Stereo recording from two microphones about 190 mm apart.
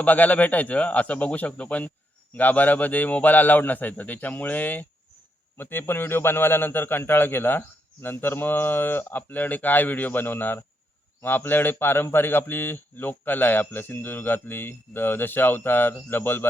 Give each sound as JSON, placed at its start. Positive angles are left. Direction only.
{"t": 0.0, "sound": "a man's voice", "side_deg": 10}